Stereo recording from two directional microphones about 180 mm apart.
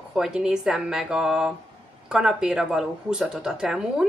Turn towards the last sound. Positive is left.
turn(degrees=-5)  # may be behind; listen again after turning